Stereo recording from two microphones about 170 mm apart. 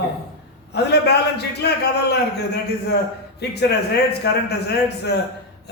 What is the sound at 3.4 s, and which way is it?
A man's voice, 75° left (ahead or behind).